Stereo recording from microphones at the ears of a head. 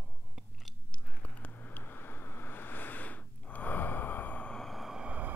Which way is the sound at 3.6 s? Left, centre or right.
Left.